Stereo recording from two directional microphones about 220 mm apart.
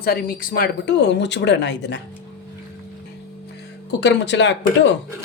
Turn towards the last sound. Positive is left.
turn(degrees=55)  # may be behind; listen again after turning